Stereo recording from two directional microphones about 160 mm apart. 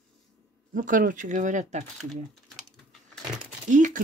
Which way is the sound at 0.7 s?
55° right (ahead or behind).